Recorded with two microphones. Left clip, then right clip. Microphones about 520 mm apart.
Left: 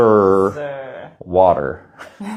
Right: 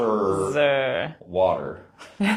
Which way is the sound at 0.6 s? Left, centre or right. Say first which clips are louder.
Right 7 dB; right.